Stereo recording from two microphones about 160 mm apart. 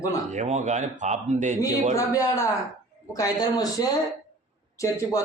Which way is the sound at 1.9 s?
20° left (ahead or behind).